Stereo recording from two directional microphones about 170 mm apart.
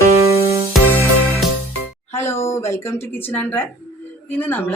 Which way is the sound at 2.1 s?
15° left (ahead or behind).